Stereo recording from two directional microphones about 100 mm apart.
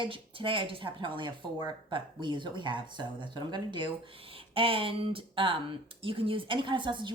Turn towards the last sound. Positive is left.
turn(degrees=-50)  # may be behind; listen again after turning